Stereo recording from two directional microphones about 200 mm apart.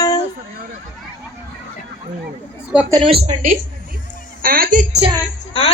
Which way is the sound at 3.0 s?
30° right (ahead or behind).